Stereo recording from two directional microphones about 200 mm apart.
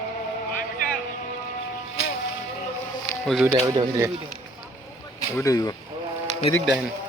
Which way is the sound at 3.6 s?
15° right (ahead or behind).